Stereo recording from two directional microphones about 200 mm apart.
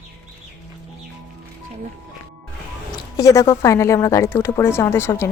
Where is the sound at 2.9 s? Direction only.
20° left (ahead or behind).